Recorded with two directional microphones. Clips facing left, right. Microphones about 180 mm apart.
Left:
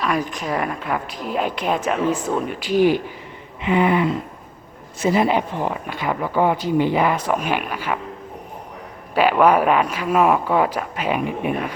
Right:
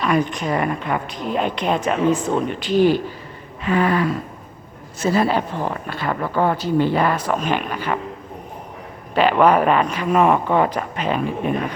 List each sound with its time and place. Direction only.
0.0 s speech: centre (ahead or behind)
3.6 s a sound: 20° left (ahead or behind)
5.0 s speech: 15° left (ahead or behind)
9.1 s speech: 10° left (ahead or behind)